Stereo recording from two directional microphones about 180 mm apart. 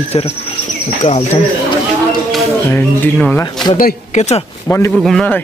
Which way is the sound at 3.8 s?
40° left (ahead or behind).